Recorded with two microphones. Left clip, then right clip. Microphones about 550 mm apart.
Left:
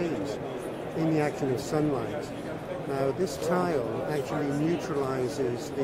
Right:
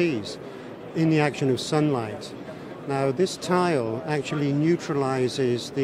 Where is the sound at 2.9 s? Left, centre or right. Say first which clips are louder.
Right 5 dB; right.